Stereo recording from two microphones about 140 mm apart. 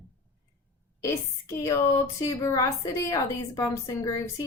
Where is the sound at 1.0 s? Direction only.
20° left (ahead or behind).